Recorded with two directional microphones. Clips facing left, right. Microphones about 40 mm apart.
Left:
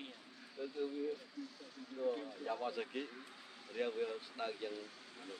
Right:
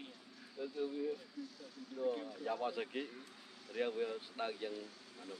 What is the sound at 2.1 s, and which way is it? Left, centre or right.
Speech, centre.